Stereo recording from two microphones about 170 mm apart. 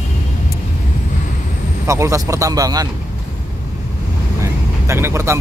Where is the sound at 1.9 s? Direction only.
20° right (ahead or behind).